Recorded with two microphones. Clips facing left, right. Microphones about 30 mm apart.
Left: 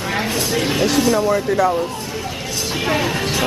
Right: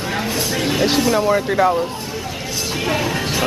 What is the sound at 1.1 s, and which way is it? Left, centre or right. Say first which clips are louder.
Speech: right 1 dB; right.